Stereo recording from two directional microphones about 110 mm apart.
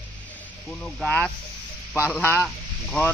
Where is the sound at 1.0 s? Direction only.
10° left (ahead or behind).